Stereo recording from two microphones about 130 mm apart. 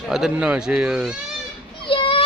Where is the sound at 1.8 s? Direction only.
40° left (ahead or behind).